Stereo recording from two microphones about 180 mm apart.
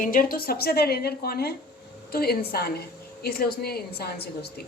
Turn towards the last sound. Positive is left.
turn(degrees=60)  # may be behind; listen again after turning